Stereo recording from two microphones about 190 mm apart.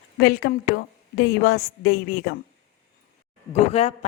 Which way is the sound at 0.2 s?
55° left (ahead or behind).